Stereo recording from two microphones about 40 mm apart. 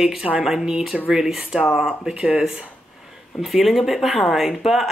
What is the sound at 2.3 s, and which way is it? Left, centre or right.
Speech, right.